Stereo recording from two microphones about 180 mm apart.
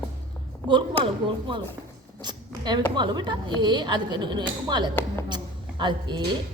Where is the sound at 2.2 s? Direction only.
25° right (ahead or behind).